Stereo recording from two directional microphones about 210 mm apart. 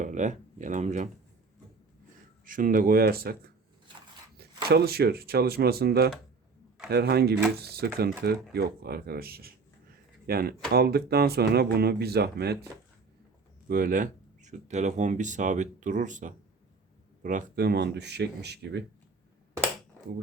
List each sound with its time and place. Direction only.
0.0 s speech: 35° right (ahead or behind)
2.4 s speech: 40° right (ahead or behind)
13.7 s speech: 40° right (ahead or behind)